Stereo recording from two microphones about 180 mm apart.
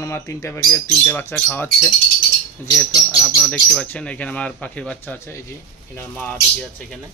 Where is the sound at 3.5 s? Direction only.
5° left (ahead or behind).